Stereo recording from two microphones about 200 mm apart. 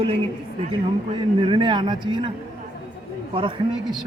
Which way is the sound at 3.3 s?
25° right (ahead or behind).